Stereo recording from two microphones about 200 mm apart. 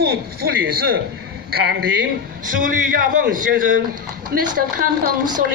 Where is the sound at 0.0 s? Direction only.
50° right (ahead or behind).